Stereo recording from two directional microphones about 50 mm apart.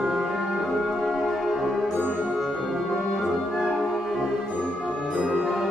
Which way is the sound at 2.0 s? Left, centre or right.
Right.